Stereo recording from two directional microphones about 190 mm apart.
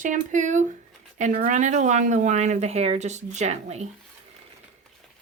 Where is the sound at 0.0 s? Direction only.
40° right (ahead or behind).